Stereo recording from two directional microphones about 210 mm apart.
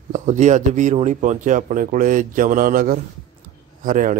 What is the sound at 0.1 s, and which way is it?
Speech, 35° right (ahead or behind).